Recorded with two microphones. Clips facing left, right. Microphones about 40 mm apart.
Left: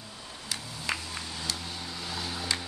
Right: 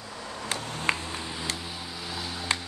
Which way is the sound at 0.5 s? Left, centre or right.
Right.